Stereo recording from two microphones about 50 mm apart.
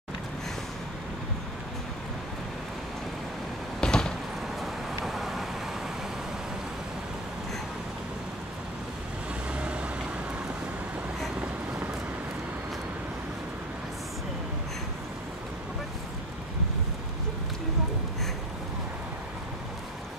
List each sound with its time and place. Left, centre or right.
3.8 s a sound: centre
4.6 s vehicle: centre
9.5 s vehicle: right